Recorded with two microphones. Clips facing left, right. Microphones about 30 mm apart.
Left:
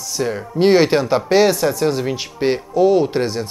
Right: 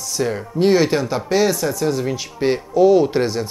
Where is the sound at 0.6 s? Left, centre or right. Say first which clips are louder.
Left 2 dB; left.